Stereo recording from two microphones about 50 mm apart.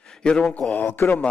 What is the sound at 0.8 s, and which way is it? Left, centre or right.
Speech, left.